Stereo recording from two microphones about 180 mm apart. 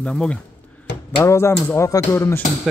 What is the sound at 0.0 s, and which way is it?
Speech, 5° left (ahead or behind).